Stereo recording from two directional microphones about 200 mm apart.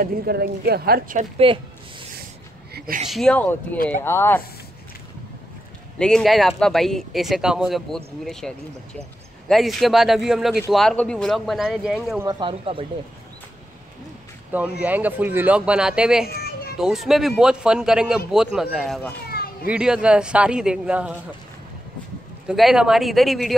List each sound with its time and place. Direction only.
0.0 s a woman's voice: 50° right (ahead or behind)
1.4 s speech: 25° right (ahead or behind)
3.1 s speech: 5° left (ahead or behind)
5.9 s speech: 5° left (ahead or behind)
12.3 s speech: 25° right (ahead or behind)
14.8 s speech: 10° right (ahead or behind)
16.3 s children playing: 50° left (ahead or behind)
16.7 s speech: centre (ahead or behind)
19.2 s children playing: 50° left (ahead or behind)
19.7 s speech: 5° right (ahead or behind)
22.5 s speech: 5° right (ahead or behind)